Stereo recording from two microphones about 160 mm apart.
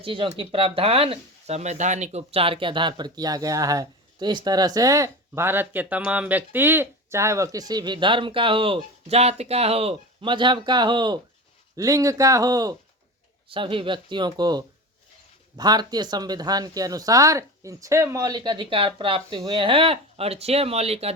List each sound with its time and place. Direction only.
0.0 s speech: 35° right (ahead or behind)
13.5 s speech: 35° right (ahead or behind)